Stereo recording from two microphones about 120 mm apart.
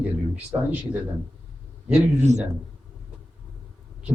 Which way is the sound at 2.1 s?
70° right (ahead or behind).